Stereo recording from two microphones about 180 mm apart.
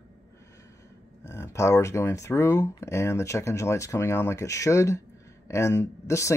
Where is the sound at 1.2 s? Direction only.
15° left (ahead or behind).